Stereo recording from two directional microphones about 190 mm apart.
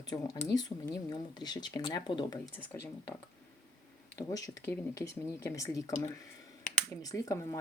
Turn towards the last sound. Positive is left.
turn(degrees=15)  # may be behind; listen again after turning